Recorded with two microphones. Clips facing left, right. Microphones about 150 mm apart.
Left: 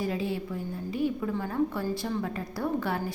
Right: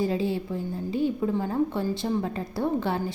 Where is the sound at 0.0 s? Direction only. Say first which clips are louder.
Right 4 dB; 30° right (ahead or behind).